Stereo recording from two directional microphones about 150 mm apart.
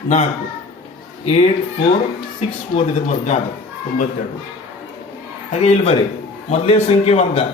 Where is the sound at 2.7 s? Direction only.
50° left (ahead or behind).